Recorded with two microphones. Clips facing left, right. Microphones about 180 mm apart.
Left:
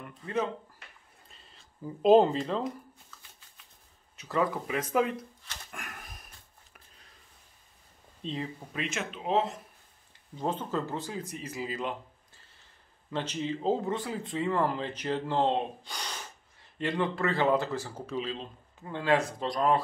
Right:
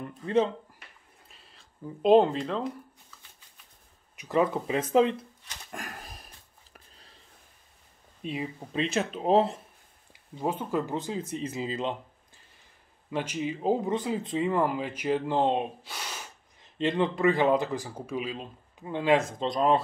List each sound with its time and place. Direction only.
0.2 s speech: 30° right (ahead or behind)
1.3 s speech: centre (ahead or behind)
4.2 s speech: 20° right (ahead or behind)
5.7 s a sound: 35° right (ahead or behind)
8.2 s speech: 10° right (ahead or behind)
8.7 s speech: 35° right (ahead or behind)
10.4 s speech: 10° right (ahead or behind)
13.1 s speech: 10° right (ahead or behind)
15.8 s gasp: 5° right (ahead or behind)
16.6 s speech: 20° right (ahead or behind)